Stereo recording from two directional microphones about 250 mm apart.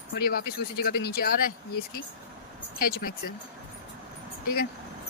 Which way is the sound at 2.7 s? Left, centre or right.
Left.